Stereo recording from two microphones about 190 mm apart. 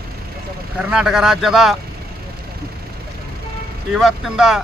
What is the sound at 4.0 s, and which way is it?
Speech, centre (ahead or behind).